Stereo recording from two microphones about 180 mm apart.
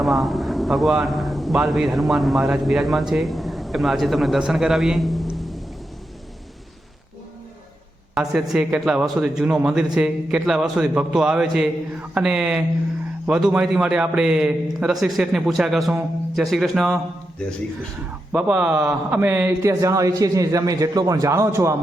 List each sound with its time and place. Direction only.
0.0 s a man's voice: centre (ahead or behind)
5.4 s thunder: centre (ahead or behind)
8.1 s a man's voice: 5° right (ahead or behind)
18.3 s a man's voice: 10° right (ahead or behind)